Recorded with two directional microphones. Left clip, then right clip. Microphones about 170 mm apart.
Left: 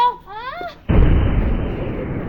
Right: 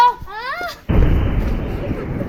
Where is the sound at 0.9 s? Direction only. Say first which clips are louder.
Left 4 dB; centre (ahead or behind).